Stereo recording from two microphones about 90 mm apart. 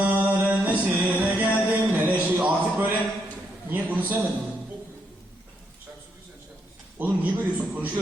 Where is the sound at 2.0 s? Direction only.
20° right (ahead or behind).